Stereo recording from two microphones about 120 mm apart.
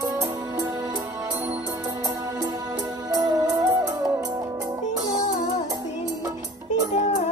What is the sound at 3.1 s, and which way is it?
Music, 30° right (ahead or behind).